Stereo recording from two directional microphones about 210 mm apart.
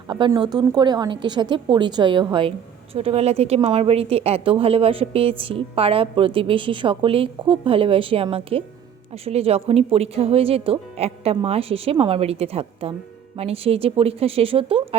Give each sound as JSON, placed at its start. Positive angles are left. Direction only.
{"t": 0.1, "sound": "a woman's voice", "side_deg": -20}